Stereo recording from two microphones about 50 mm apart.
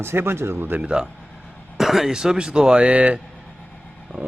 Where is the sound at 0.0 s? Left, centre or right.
Right.